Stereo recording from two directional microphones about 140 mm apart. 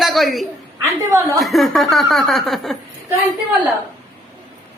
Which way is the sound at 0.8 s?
20° right (ahead or behind).